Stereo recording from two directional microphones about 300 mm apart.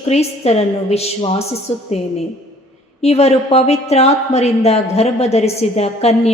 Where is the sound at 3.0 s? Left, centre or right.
Left.